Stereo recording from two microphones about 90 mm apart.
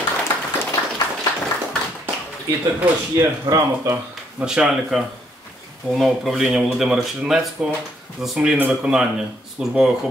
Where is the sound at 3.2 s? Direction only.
35° right (ahead or behind).